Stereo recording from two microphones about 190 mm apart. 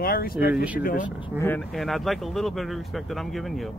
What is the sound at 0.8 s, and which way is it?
Speech, 45° left (ahead or behind).